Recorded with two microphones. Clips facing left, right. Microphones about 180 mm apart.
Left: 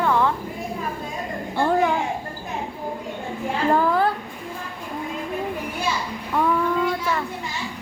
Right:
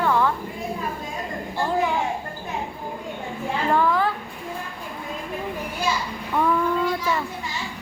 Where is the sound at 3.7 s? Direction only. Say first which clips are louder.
Left 1 dB; 35° left (ahead or behind).